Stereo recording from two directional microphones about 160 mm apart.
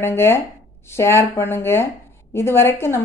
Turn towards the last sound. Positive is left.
turn(degrees=15)  # may be behind; listen again after turning